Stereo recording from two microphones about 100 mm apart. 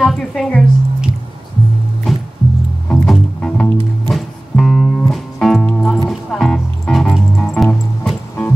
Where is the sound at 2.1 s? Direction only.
Centre (ahead or behind).